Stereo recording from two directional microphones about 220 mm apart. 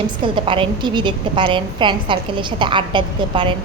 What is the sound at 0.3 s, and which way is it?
A woman's voice, 20° right (ahead or behind).